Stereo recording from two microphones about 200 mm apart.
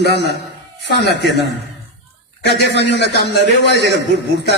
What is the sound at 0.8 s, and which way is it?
Speech, 60° left (ahead or behind).